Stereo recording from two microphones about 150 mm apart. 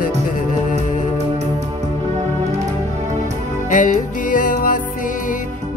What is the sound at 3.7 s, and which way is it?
Music, 60° left (ahead or behind).